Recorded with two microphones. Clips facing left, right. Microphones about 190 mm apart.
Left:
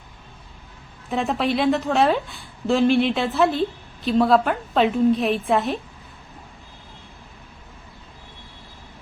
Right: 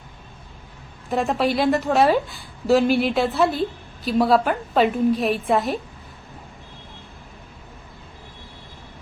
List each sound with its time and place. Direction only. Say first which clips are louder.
1.1 s a woman's voice: right 1 dB; centre (ahead or behind)